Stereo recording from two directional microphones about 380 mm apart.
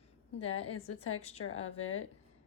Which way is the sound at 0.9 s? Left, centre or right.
Left.